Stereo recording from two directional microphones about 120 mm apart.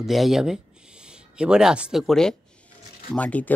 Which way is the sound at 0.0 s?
Centre (ahead or behind).